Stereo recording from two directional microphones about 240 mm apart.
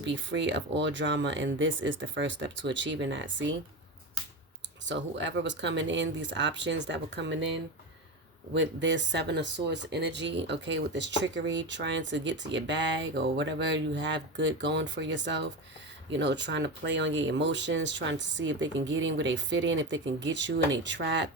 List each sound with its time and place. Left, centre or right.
0.0 s speech: right
4.9 s speech: right
8.5 s speech: right